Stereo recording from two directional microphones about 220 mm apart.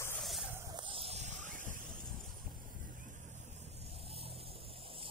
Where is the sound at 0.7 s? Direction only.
25° right (ahead or behind).